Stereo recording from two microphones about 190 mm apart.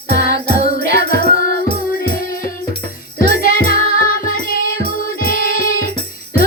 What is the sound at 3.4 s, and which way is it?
Music, 50° left (ahead or behind).